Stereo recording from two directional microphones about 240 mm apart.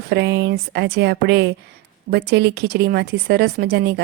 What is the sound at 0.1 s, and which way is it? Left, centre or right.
Speech, right.